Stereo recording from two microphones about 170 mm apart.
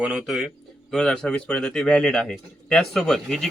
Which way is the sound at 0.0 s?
5° right (ahead or behind).